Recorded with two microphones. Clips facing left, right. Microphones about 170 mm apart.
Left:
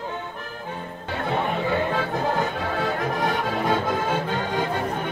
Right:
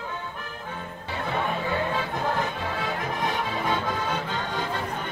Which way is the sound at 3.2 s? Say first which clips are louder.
Left 3 dB; 50° left (ahead or behind).